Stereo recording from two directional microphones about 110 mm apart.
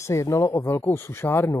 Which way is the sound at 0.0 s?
25° left (ahead or behind).